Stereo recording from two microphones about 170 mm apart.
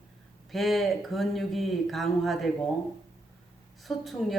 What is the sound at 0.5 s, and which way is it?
Speech, centre (ahead or behind).